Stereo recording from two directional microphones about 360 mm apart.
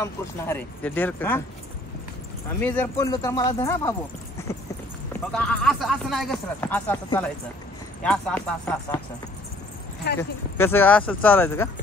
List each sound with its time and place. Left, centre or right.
0.0 s speech: centre
2.6 s speech: centre
5.1 s speech: centre
10.1 s speech: left
10.6 s speech: centre